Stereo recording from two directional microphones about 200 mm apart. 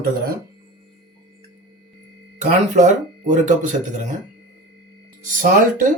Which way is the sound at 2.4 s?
35° right (ahead or behind).